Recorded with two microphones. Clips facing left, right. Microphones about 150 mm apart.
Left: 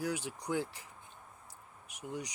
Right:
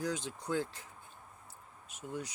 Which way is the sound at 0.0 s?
10° left (ahead or behind).